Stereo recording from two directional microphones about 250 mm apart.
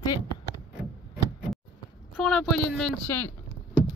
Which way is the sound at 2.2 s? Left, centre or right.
Centre.